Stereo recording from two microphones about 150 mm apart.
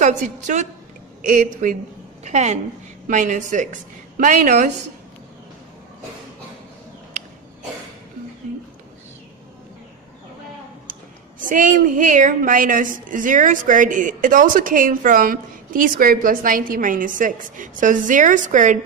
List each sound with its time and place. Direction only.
0.0 s a woman's voice: 55° right (ahead or behind)
2.2 s a woman's voice: 50° right (ahead or behind)
11.3 s a woman's voice: 60° right (ahead or behind)